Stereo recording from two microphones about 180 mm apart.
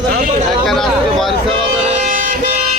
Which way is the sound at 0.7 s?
Centre (ahead or behind).